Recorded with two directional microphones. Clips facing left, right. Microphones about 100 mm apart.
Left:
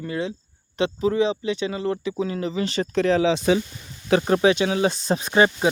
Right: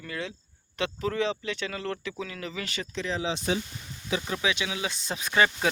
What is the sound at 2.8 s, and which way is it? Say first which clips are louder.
Speech: left 12 dB; 55° left (ahead or behind).